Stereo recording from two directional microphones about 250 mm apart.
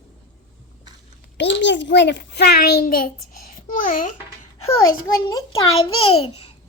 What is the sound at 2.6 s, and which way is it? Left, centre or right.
Speech, left.